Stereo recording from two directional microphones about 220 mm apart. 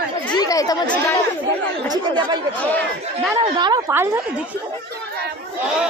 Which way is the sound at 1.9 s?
20° right (ahead or behind).